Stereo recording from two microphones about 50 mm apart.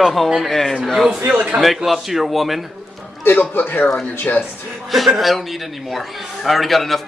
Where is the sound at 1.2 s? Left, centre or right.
Right.